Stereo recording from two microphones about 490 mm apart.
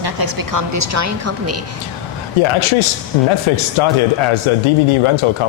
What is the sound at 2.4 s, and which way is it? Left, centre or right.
Speech, left.